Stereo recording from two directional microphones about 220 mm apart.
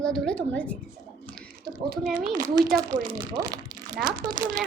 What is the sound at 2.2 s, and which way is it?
A child's voice, 15° right (ahead or behind).